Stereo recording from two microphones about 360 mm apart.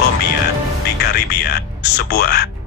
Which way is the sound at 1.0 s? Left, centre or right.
Left.